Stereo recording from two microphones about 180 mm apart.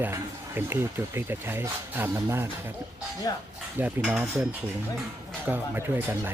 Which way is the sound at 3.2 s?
20° left (ahead or behind).